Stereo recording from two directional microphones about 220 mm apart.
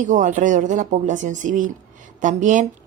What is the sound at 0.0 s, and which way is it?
Speech, 35° right (ahead or behind).